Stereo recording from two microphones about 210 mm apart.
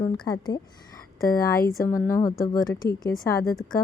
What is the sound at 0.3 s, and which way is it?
Speech, 20° left (ahead or behind).